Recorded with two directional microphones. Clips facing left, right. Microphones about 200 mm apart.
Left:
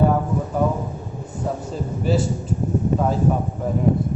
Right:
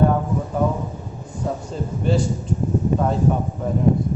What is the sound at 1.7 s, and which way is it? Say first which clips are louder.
Speech: even; 5° left (ahead or behind).